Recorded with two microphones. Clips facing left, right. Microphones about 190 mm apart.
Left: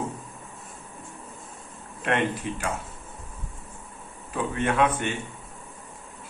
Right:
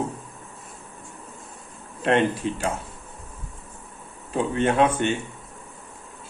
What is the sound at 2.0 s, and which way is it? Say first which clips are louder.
Speech: right 5 dB; 30° right (ahead or behind).